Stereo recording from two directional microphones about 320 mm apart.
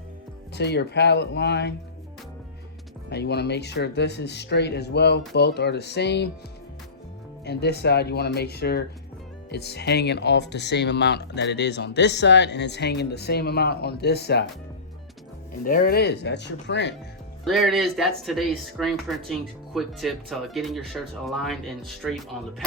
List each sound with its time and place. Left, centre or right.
0.5 s speech: left
3.1 s speech: left
7.4 s speech: left
15.6 s speech: left
17.4 s speech: centre